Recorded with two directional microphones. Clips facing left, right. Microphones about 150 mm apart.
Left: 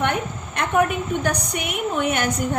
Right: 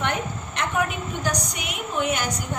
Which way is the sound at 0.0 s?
55° left (ahead or behind).